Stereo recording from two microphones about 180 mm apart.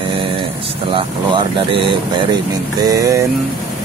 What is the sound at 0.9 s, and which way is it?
Speech, 25° right (ahead or behind).